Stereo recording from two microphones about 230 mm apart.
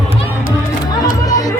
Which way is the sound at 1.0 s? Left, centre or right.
Centre.